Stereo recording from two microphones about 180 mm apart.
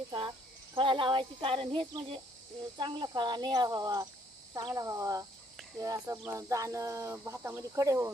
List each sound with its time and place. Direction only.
0.1 s speech: 25° right (ahead or behind)